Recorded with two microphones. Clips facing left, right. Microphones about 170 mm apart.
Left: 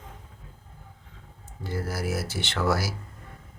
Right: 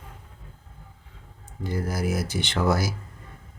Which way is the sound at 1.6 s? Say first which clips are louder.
Right 3 dB; 15° right (ahead or behind).